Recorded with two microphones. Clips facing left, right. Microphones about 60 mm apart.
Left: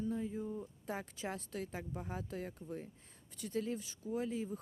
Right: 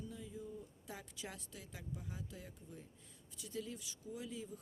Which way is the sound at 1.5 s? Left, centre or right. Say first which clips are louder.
Left 8 dB; left.